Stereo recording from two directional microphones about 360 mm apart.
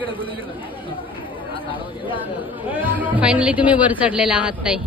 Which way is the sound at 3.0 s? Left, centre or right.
Centre.